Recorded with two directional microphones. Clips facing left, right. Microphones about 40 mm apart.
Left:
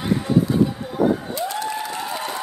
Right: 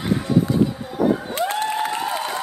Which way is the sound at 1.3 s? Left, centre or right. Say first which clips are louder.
Right 3 dB; right.